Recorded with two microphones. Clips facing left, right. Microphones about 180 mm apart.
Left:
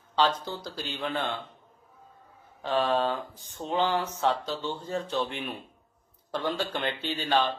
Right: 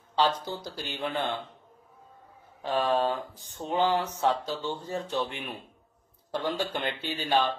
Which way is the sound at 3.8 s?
40° right (ahead or behind).